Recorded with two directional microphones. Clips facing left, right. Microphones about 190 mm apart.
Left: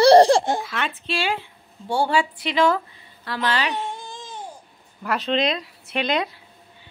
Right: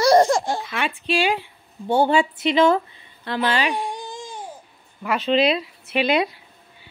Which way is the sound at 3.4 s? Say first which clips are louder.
Right 2 dB; 15° right (ahead or behind).